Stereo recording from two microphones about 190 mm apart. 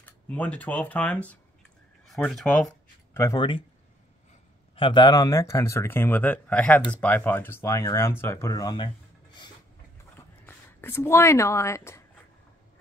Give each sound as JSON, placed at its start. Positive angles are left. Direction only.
{"t": 0.0, "sound": "speech", "side_deg": 10}
{"t": 2.0, "sound": "a sound", "side_deg": 0}
{"t": 3.2, "sound": "speech", "side_deg": 15}
{"t": 4.7, "sound": "speech", "side_deg": 25}
{"t": 10.4, "sound": "speech", "side_deg": 10}